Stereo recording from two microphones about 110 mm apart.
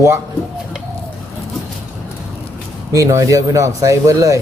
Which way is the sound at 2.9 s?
30° right (ahead or behind).